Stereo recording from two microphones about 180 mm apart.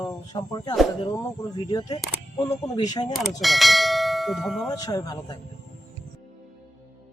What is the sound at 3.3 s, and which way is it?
Bell, centre (ahead or behind).